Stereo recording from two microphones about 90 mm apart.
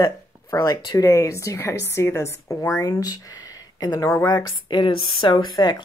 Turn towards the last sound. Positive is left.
turn(degrees=55)  # may be behind; listen again after turning